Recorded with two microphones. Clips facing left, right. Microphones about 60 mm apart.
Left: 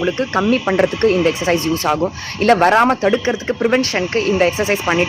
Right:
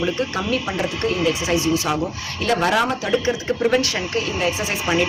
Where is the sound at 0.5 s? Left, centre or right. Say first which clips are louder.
Left 8 dB; left.